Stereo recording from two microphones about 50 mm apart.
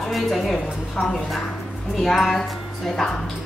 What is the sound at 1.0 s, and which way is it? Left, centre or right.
Speech, left.